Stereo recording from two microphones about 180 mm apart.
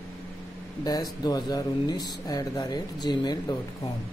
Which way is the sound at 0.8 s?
20° left (ahead or behind).